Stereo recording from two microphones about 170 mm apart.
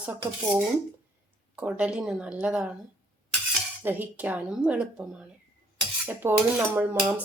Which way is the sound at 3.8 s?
10° right (ahead or behind).